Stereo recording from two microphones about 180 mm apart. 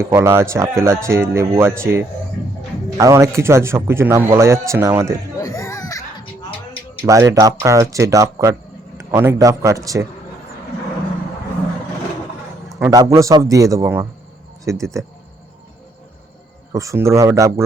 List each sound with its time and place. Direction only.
0.0 s a man's voice: 15° right (ahead or behind)
5.4 s music: 15° left (ahead or behind)
7.0 s a man's voice: 15° right (ahead or behind)
12.9 s a man's voice: 20° right (ahead or behind)
16.7 s a man's voice: 15° right (ahead or behind)